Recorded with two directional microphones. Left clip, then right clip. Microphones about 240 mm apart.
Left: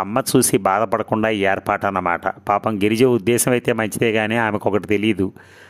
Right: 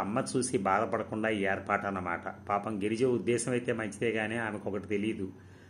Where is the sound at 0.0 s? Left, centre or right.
Left.